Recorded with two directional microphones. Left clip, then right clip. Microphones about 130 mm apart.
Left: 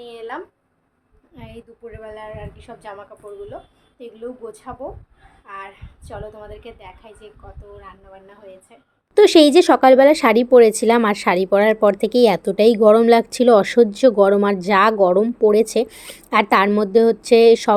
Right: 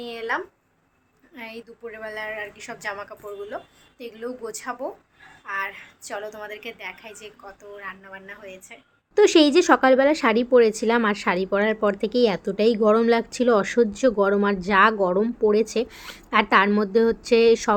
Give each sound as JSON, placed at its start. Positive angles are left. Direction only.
{"t": 0.0, "sound": "a sound", "side_deg": -15}
{"t": 1.4, "sound": "a woman's voice", "side_deg": 5}
{"t": 9.1, "sound": "speech", "side_deg": 25}
{"t": 15.9, "sound": "speech", "side_deg": 10}
{"t": 16.3, "sound": "speech", "side_deg": 25}